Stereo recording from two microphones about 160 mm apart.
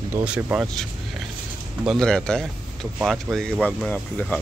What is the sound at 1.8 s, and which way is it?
Speech, 5° left (ahead or behind).